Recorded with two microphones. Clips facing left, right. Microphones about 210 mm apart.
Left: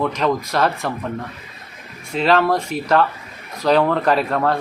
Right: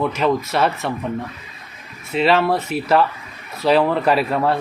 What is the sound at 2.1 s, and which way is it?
Speech, 5° right (ahead or behind).